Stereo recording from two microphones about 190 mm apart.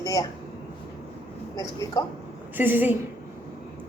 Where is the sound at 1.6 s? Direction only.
20° left (ahead or behind).